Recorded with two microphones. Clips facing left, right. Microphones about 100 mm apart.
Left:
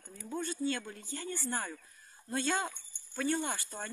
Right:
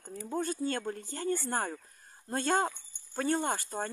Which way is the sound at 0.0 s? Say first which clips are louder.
Right 5 dB; 40° right (ahead or behind).